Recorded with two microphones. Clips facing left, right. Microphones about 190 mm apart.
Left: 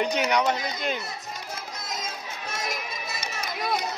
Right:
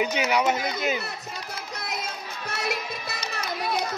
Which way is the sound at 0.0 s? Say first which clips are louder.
Even; 5° right (ahead or behind).